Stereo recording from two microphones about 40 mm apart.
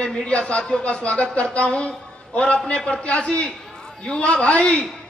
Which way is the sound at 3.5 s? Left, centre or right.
Centre.